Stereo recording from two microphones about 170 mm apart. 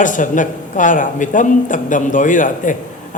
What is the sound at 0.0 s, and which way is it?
Speech, 50° left (ahead or behind).